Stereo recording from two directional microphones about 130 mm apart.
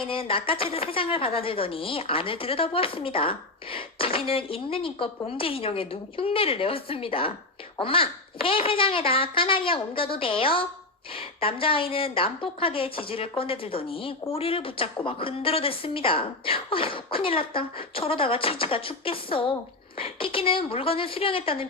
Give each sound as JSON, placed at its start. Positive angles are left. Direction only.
{"t": 0.0, "sound": "a woman's voice", "side_deg": 45}